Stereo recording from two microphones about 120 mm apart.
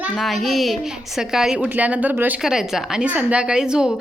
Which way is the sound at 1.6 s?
15° right (ahead or behind).